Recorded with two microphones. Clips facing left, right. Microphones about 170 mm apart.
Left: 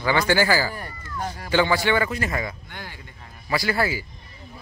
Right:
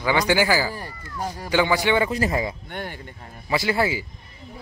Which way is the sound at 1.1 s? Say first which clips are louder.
Even; 10° right (ahead or behind).